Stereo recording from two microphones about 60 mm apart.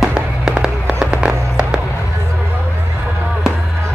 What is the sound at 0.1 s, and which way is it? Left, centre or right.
Fireworks, centre.